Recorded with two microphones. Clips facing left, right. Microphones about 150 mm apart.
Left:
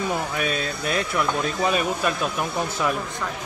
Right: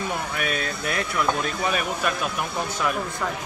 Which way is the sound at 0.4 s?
25° left (ahead or behind).